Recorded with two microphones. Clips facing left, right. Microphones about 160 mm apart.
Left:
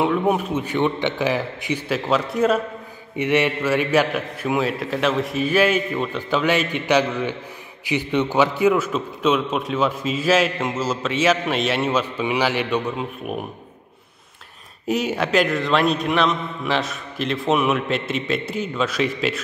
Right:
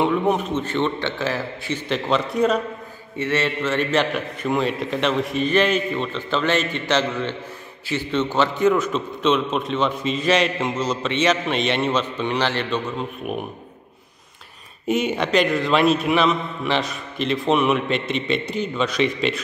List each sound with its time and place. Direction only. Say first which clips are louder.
0.0 s a man's voice: even; 5° left (ahead or behind)
3.2 s a man's voice: left 3 dB; 15° left (ahead or behind)
13.2 s a man's voice: right 1 dB; centre (ahead or behind)
14.9 s a man's voice: right 1 dB; centre (ahead or behind)